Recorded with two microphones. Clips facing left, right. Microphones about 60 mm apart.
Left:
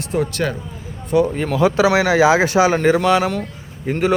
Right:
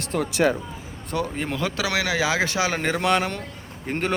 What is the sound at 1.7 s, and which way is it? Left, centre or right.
Speech, left.